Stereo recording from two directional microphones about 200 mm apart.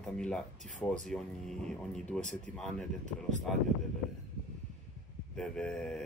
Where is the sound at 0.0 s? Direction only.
5° left (ahead or behind).